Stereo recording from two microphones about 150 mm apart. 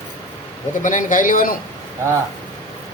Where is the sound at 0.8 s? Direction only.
60° left (ahead or behind).